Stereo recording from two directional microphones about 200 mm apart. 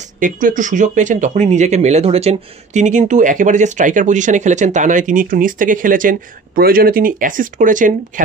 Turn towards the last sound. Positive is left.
turn(degrees=-40)  # may be behind; listen again after turning